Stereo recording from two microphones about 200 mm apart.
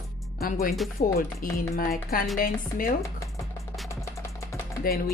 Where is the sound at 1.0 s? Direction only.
45° left (ahead or behind).